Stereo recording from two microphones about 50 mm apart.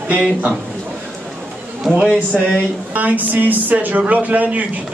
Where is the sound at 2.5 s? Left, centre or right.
Right.